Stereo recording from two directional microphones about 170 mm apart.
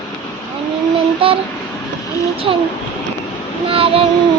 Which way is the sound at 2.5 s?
30° right (ahead or behind).